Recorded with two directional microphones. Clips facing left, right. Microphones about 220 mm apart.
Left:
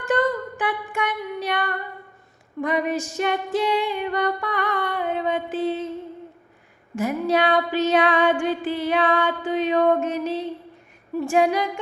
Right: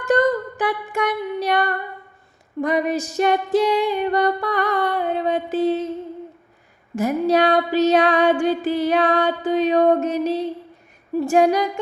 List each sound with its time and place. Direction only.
0.0 s a sound: 40° right (ahead or behind)
2.6 s music: 40° right (ahead or behind)
6.9 s music: 40° right (ahead or behind)